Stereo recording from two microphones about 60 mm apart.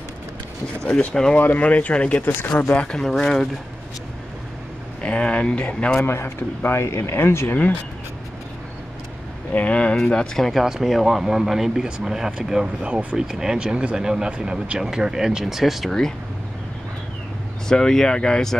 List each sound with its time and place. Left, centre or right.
0.8 s speech: centre
1.3 s speech: left
2.7 s speech: centre
5.0 s speech: centre
5.9 s speech: left
9.5 s speech: left; by 10.6 s centre
10.6 s speech: centre
17.6 s speech: centre